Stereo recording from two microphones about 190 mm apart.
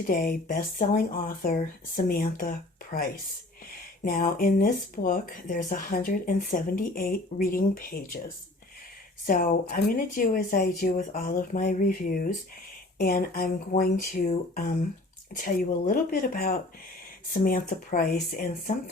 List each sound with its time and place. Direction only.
0.1 s speech: 50° left (ahead or behind)
9.2 s speech: 45° left (ahead or behind)
15.3 s speech: 45° left (ahead or behind)